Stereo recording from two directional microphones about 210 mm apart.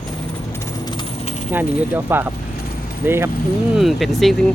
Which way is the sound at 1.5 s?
10° right (ahead or behind).